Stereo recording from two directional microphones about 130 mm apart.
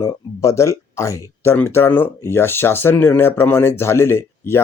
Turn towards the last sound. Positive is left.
turn(degrees=20)  # may be behind; listen again after turning